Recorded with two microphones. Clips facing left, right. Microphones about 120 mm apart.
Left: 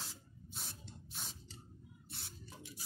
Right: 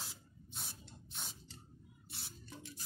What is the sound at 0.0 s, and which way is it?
Spray, centre (ahead or behind).